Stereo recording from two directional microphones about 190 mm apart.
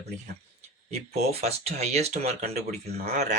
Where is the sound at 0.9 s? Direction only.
35° right (ahead or behind).